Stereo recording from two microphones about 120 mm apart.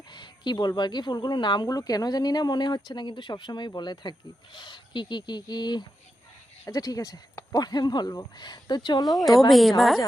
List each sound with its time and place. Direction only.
0.1 s speech: 35° left (ahead or behind)
9.0 s a woman's voice: centre (ahead or behind)